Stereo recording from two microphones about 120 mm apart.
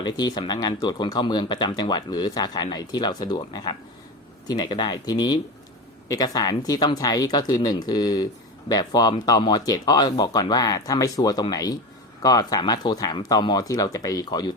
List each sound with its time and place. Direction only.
0.0 s speech: 35° left (ahead or behind)